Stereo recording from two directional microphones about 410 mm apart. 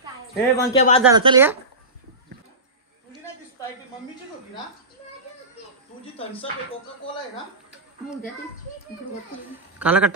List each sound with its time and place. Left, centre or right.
0.0 s a sound: centre
0.7 s speech: centre
1.1 s speech: centre
9.8 s speech: centre